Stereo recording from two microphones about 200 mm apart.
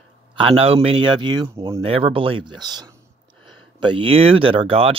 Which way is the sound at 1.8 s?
30° right (ahead or behind).